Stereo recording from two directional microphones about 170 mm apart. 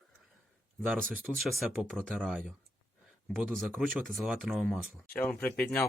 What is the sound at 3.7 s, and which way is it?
Speech, 10° right (ahead or behind).